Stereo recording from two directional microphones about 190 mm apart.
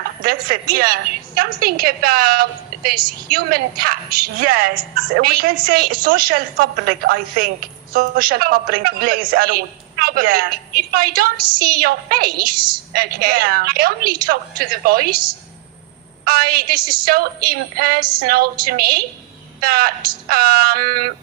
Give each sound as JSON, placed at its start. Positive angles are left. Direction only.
{"t": 0.2, "sound": "a woman's voice", "side_deg": -50}
{"t": 16.2, "sound": "a woman's voice", "side_deg": -50}